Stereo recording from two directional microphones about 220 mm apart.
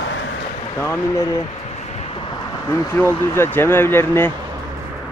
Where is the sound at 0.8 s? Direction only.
10° left (ahead or behind).